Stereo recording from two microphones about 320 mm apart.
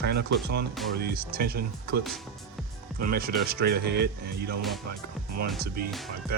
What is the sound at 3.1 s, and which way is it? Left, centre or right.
Speech, right.